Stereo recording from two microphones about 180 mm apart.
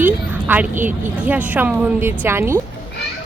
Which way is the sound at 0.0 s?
10° right (ahead or behind).